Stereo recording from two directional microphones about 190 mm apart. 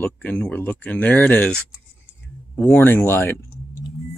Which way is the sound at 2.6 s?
10° left (ahead or behind).